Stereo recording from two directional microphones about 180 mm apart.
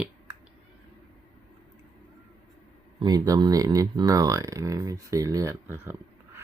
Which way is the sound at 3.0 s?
20° right (ahead or behind).